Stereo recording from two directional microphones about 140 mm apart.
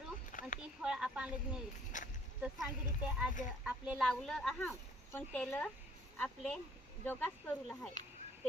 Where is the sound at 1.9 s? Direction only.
65° left (ahead or behind).